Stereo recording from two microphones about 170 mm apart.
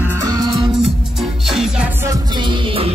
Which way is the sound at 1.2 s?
Centre (ahead or behind).